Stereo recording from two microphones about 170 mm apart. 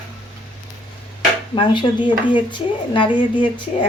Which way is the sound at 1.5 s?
30° left (ahead or behind).